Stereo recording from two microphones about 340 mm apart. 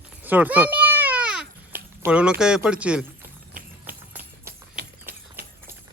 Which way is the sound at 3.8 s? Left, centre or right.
Centre.